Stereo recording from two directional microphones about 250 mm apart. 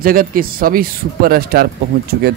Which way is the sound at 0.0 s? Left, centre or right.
Right.